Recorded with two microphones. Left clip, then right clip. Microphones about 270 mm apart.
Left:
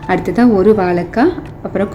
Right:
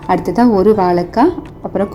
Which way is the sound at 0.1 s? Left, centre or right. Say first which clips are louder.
Even; centre.